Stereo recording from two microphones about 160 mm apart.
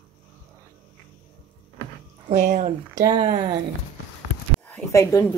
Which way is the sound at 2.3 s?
45° right (ahead or behind).